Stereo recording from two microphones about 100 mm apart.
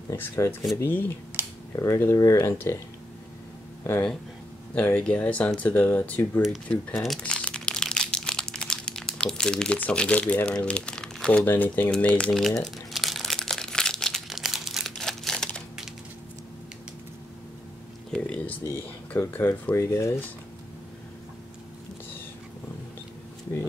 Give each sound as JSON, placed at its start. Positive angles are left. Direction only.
{"t": 0.1, "sound": "speech", "side_deg": 25}
{"t": 1.4, "sound": "a sound", "side_deg": -25}
{"t": 1.8, "sound": "speech", "side_deg": 25}
{"t": 4.7, "sound": "speech", "side_deg": 15}
{"t": 6.7, "sound": "crumpling", "side_deg": 5}
{"t": 18.1, "sound": "a sound", "side_deg": 10}
{"t": 18.6, "sound": "speech", "side_deg": 25}